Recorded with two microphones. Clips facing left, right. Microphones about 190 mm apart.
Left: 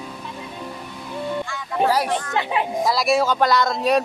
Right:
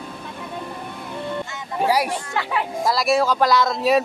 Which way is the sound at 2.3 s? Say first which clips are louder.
Left 2 dB; 20° left (ahead or behind).